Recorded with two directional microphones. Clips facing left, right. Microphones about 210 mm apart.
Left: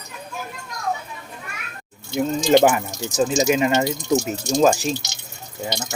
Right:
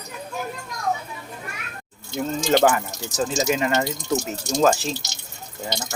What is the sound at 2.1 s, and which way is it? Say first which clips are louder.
Speech: left 4 dB; 15° left (ahead or behind).